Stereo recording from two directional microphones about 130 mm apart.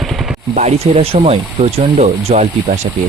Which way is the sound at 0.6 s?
55° right (ahead or behind).